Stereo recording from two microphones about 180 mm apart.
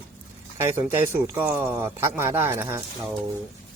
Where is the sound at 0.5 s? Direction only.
15° right (ahead or behind).